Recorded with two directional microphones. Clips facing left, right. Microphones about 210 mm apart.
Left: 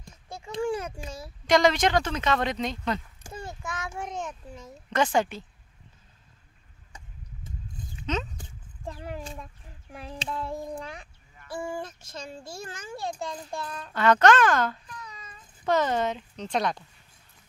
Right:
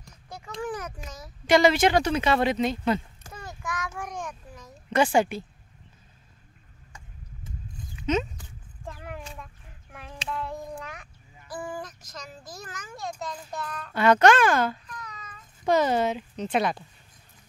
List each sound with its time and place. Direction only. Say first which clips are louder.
0.0 s a sound: left 1 dB; 25° left (ahead or behind)
1.5 s speech: right 2 dB; 5° right (ahead or behind)
3.3 s a sound: left 3 dB; 25° left (ahead or behind)
4.0 s child singing: left 1 dB; 25° left (ahead or behind)
4.9 s speech: right 3 dB; 10° right (ahead or behind)
8.8 s child singing: left 3 dB; 30° left (ahead or behind)
13.9 s speech: right 1 dB; 10° right (ahead or behind)
14.9 s a sound: right 1 dB; 30° left (ahead or behind)
15.6 s speech: right 2 dB; 10° right (ahead or behind)